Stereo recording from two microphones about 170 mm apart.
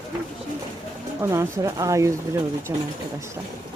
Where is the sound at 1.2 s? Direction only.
20° right (ahead or behind).